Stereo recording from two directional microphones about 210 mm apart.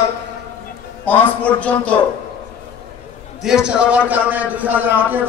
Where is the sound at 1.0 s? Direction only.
10° left (ahead or behind).